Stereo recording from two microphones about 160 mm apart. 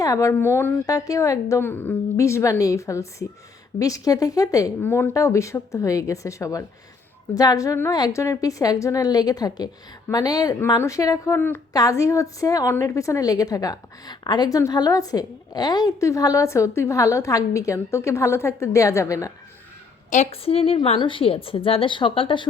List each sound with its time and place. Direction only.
0.0 s a woman's voice: 20° left (ahead or behind)
20.1 s a woman's voice: 45° left (ahead or behind)